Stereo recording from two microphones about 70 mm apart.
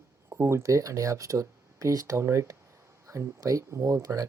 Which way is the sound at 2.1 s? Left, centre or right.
Right.